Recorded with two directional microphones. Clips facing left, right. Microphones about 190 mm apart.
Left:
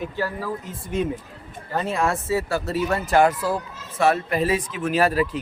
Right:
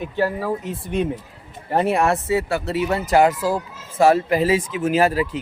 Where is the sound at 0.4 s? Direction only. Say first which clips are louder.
Right 5 dB; 65° right (ahead or behind).